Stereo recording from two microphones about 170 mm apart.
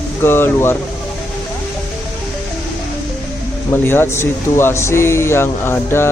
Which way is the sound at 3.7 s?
15° left (ahead or behind).